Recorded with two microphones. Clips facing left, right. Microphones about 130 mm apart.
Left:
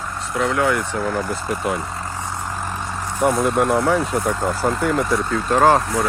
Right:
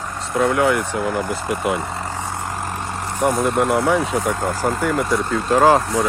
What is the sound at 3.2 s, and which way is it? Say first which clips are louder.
Speech: even; centre (ahead or behind).